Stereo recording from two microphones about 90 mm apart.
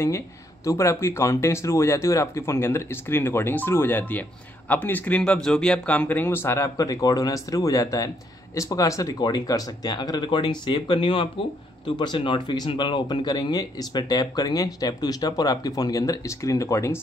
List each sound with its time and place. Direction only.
0.7 s speech: 30° left (ahead or behind)